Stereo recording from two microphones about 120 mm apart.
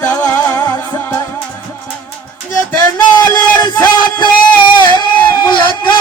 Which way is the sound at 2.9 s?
25° left (ahead or behind).